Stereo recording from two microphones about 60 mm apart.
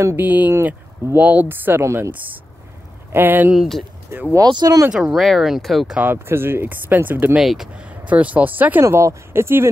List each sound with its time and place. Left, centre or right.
0.2 s speech: right
1.8 s speech: right
3.1 s speech: right
3.5 s speech: centre
4.4 s speech: right
4.9 s speech: centre
6.1 s speech: right
7.4 s speech: centre
7.7 s speech: right
8.8 s speech: right